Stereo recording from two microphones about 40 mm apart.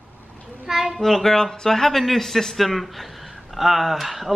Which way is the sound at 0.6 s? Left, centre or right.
Centre.